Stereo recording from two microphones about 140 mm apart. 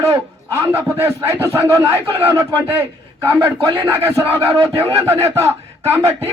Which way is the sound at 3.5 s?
30° right (ahead or behind).